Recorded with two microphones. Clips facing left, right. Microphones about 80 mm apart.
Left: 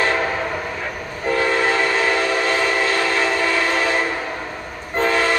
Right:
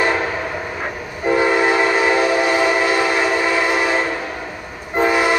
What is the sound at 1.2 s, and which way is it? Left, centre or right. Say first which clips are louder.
Train: right 3 dB; centre.